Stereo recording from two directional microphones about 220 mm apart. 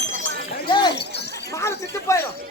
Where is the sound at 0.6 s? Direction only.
20° left (ahead or behind).